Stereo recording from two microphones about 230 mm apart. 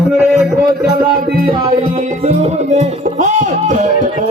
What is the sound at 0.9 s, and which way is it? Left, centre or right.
Music, right.